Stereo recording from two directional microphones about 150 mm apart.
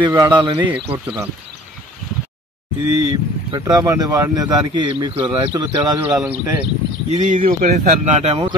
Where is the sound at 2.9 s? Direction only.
25° right (ahead or behind).